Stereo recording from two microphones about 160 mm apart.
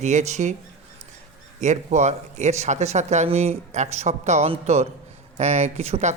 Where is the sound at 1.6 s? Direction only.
45° right (ahead or behind).